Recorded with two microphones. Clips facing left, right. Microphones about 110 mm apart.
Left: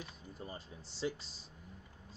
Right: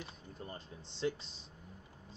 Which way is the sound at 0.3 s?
5° left (ahead or behind).